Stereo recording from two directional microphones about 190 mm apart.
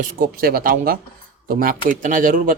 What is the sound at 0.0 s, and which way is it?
A man's voice, 45° right (ahead or behind).